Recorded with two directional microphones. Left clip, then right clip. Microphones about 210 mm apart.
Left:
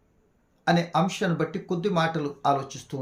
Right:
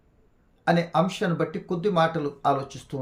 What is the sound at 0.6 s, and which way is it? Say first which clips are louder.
Speech: right 1 dB; 5° right (ahead or behind).